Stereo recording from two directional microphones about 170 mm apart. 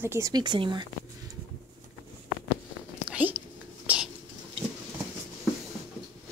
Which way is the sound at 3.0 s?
10° right (ahead or behind).